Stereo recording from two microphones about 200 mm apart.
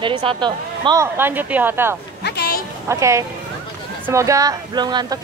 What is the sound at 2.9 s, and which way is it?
Speech, 15° right (ahead or behind).